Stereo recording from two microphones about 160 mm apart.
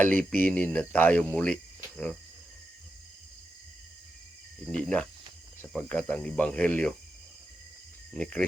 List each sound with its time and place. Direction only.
0.0 s speech: 10° left (ahead or behind)
4.7 s speech: 5° left (ahead or behind)
8.1 s speech: 5° left (ahead or behind)